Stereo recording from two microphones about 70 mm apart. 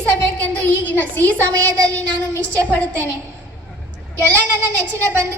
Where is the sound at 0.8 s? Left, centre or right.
Left.